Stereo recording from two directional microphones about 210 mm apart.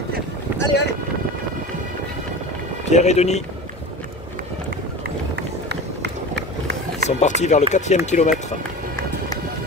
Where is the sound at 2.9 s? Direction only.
35° left (ahead or behind).